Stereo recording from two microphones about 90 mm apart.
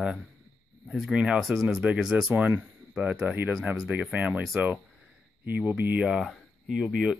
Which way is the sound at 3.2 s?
20° right (ahead or behind).